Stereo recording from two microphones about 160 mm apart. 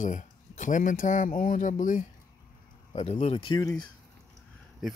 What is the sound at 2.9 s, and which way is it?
Speech, 45° left (ahead or behind).